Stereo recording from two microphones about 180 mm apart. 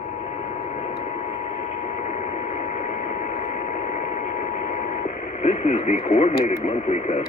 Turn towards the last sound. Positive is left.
turn(degrees=40)  # may be behind; listen again after turning